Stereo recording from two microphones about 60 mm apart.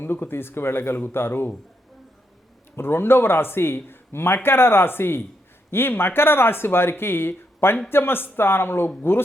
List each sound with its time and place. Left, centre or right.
0.0 s speech: left
2.7 s speech: left